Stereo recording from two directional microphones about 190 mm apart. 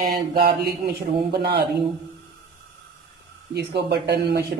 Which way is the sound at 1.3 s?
60° right (ahead or behind).